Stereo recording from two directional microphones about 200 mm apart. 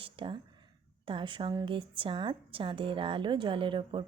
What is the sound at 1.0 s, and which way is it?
Speech, 25° right (ahead or behind).